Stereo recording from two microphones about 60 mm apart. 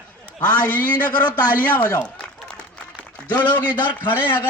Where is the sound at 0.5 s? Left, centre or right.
Left.